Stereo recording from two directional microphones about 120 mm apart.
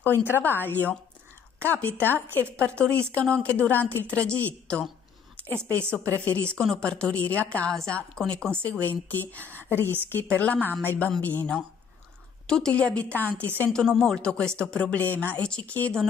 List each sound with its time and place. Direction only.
0.0 s a woman's voice: 15° left (ahead or behind)
5.7 s a woman's voice: 10° left (ahead or behind)